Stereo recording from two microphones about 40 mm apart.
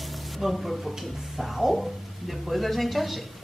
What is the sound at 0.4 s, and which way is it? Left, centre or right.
Speech, centre.